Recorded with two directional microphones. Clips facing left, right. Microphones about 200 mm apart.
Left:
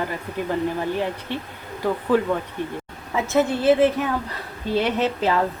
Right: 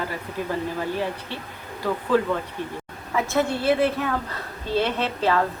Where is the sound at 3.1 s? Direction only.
20° left (ahead or behind).